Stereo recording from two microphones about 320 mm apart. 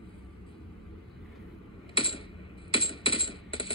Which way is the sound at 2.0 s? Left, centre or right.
Centre.